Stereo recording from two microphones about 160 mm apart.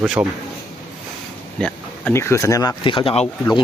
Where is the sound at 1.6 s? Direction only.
10° left (ahead or behind); by 3.3 s 40° left (ahead or behind).